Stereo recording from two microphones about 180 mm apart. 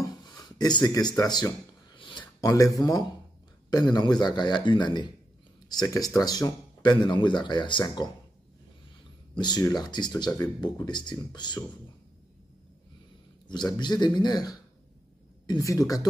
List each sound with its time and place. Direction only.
0.0 s wood: 20° left (ahead or behind)
2.0 s a sound: 25° left (ahead or behind)
3.7 s speech: 25° left (ahead or behind)
9.3 s speech: 25° left (ahead or behind)
13.5 s speech: 25° left (ahead or behind)